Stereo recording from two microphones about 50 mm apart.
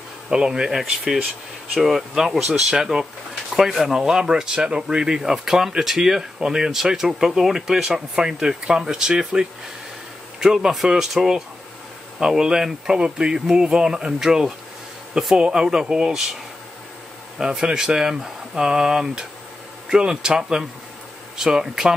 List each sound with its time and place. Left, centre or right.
0.3 s speech: centre
17.4 s speech: centre